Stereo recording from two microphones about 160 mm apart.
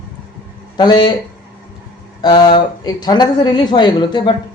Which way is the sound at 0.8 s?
25° left (ahead or behind).